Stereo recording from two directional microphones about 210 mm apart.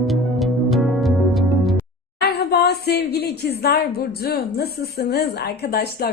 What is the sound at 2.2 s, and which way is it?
Speech, 50° left (ahead or behind).